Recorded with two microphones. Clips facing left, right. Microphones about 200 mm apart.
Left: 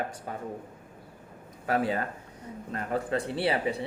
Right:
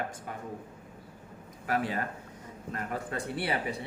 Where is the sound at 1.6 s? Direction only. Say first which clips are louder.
Left 4 dB; 30° left (ahead or behind).